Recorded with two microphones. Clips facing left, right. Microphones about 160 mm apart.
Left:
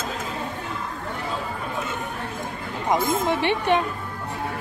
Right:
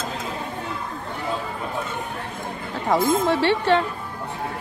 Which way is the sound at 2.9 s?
15° left (ahead or behind).